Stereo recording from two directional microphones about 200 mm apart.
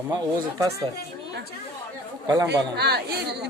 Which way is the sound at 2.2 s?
15° right (ahead or behind).